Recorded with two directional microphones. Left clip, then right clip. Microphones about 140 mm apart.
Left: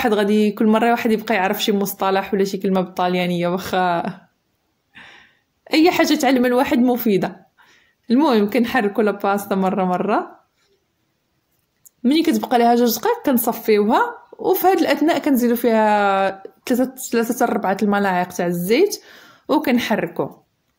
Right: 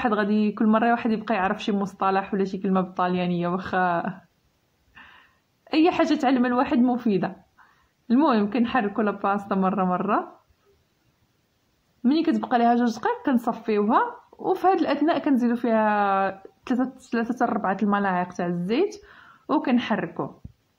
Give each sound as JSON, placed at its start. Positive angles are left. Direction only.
{"t": 0.0, "sound": "speech", "side_deg": 25}
{"t": 4.9, "sound": "a sound", "side_deg": 25}
{"t": 6.9, "sound": "speech", "side_deg": 25}
{"t": 12.0, "sound": "speech", "side_deg": 20}